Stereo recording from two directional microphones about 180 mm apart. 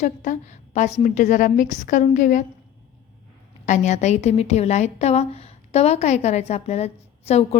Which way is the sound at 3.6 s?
40° left (ahead or behind).